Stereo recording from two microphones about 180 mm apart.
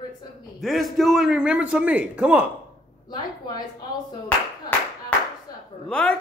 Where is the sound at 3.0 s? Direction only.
25° left (ahead or behind).